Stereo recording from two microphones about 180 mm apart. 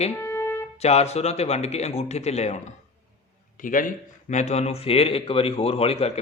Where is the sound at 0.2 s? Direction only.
15° left (ahead or behind).